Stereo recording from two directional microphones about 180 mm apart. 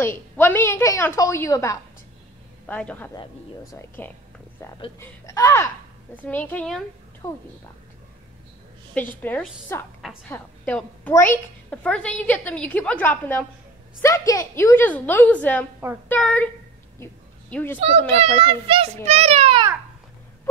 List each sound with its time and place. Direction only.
0.0 s a woman's voice: 10° left (ahead or behind)
7.2 s a woman's voice: 15° left (ahead or behind)
9.2 s a woman's voice: 10° left (ahead or behind)
17.0 s a sound: 10° left (ahead or behind)
17.7 s a child's voice: 35° right (ahead or behind)